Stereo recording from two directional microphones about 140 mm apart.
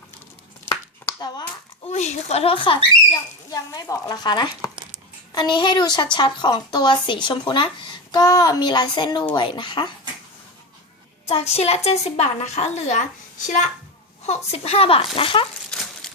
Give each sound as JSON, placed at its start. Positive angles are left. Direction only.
{"t": 1.2, "sound": "speech", "side_deg": 30}
{"t": 1.9, "sound": "a woman's voice", "side_deg": 50}
{"t": 3.5, "sound": "speech", "side_deg": 25}
{"t": 11.3, "sound": "a woman's voice", "side_deg": 50}
{"t": 14.3, "sound": "a woman's voice", "side_deg": 45}
{"t": 15.7, "sound": "chicken", "side_deg": 5}